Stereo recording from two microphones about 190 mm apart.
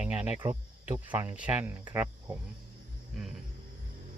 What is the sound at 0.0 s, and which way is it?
Cricket, 5° right (ahead or behind).